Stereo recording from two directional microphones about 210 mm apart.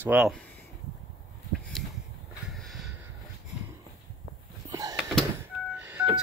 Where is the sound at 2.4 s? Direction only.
Centre (ahead or behind).